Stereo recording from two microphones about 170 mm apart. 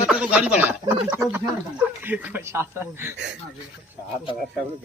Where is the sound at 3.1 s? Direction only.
90° right.